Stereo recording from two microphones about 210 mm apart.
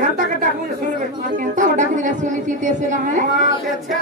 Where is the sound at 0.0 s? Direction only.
35° right (ahead or behind).